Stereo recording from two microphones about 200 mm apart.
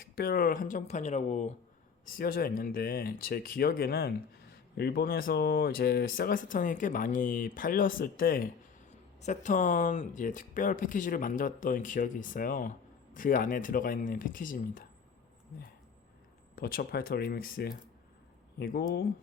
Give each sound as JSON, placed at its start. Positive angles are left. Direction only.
{"t": 0.0, "sound": "speech", "side_deg": 50}
{"t": 2.0, "sound": "speech", "side_deg": 45}
{"t": 16.6, "sound": "speech", "side_deg": 50}